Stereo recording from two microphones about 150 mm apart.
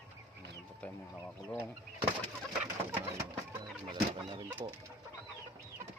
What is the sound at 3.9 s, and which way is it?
Chicken, 35° right (ahead or behind).